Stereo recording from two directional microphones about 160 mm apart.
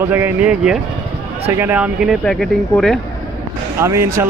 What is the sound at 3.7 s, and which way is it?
Speech, 15° right (ahead or behind).